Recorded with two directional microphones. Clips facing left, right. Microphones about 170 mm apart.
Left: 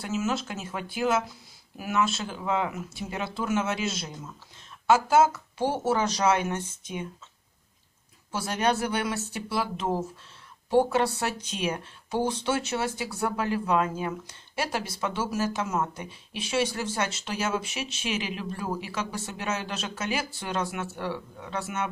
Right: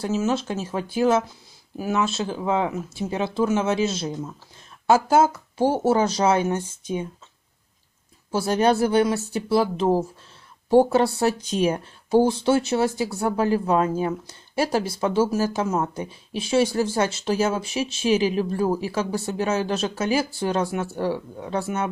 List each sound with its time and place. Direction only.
0.0 s speech: 30° right (ahead or behind)
4.8 s speech: 35° right (ahead or behind)
8.3 s speech: 30° right (ahead or behind)